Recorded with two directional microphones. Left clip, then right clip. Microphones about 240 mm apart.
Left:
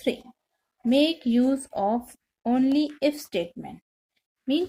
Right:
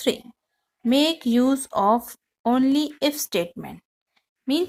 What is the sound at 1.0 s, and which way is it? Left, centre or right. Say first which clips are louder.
A woman's voice: right 3 dB; right.